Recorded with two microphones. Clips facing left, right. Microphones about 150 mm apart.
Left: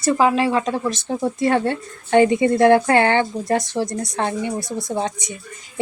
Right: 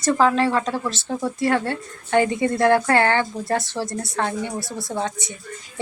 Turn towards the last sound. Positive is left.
turn(degrees=15)  # may be behind; listen again after turning